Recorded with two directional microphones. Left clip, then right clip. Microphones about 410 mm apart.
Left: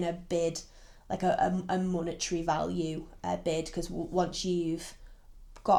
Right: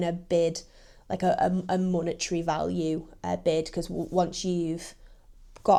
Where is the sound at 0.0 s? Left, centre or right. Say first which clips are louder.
Right 5 dB; right.